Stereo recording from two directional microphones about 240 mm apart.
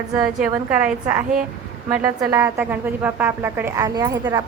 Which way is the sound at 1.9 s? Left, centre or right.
Centre.